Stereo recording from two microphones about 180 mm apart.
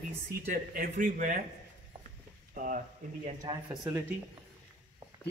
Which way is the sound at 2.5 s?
45° right (ahead or behind).